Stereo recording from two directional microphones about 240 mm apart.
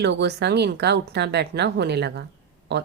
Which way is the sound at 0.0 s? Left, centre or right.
Right.